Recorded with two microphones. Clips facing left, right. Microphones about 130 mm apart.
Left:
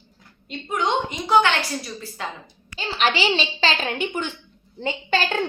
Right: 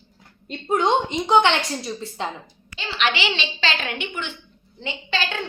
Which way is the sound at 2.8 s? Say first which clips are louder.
Left 2 dB; 40° left (ahead or behind).